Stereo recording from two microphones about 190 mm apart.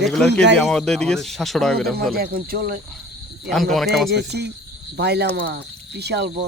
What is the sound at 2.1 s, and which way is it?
Speech, 50° right (ahead or behind).